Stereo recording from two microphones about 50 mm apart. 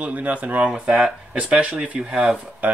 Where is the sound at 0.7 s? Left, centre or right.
Centre.